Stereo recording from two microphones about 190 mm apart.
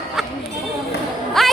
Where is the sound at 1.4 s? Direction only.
Centre (ahead or behind).